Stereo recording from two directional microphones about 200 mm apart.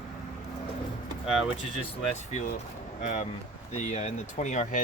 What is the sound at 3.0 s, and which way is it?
Speech, 35° left (ahead or behind).